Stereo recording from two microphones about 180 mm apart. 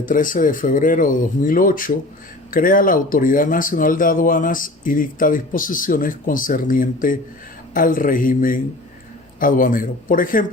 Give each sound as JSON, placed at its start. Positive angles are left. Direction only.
{"t": 0.0, "sound": "speech", "side_deg": 50}